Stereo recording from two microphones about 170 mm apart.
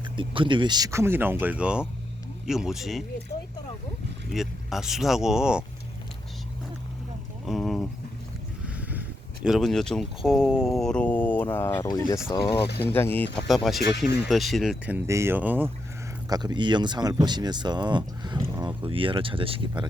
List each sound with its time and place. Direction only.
0.2 s speech: 30° right (ahead or behind); by 3.0 s centre (ahead or behind)
4.3 s speech: centre (ahead or behind)
7.4 s speech: centre (ahead or behind); by 12.6 s 30° left (ahead or behind)
12.8 s speech: 10° left (ahead or behind)
13.5 s speech: centre (ahead or behind)
16.3 s speech: 25° right (ahead or behind)